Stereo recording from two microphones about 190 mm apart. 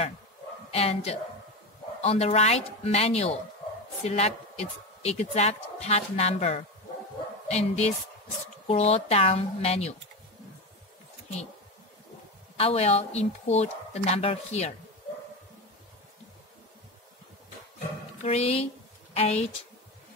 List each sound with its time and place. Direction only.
0.7 s a woman's voice: 35° left (ahead or behind)
12.5 s a woman's voice: 30° left (ahead or behind)
18.2 s a woman's voice: 35° left (ahead or behind)